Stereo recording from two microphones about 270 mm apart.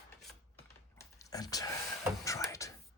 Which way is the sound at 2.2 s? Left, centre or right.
Centre.